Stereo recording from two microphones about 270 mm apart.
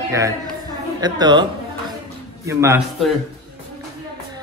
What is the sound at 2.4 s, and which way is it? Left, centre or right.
Speech, centre.